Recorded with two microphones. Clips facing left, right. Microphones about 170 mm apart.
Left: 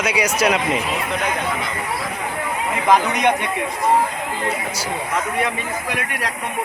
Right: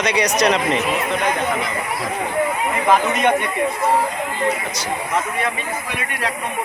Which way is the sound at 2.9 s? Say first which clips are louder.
Left 1 dB; 15° left (ahead or behind).